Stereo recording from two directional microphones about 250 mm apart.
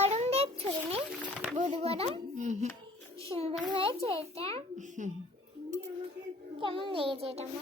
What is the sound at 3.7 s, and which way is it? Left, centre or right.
A child's voice, right.